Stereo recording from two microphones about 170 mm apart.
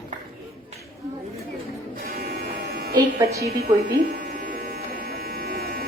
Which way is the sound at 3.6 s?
75° right (ahead or behind).